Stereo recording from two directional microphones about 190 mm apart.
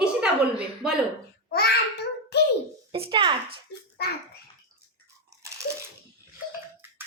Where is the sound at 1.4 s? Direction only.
55° left (ahead or behind).